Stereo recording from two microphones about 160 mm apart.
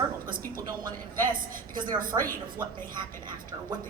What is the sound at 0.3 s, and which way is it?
A woman's voice, 60° right (ahead or behind).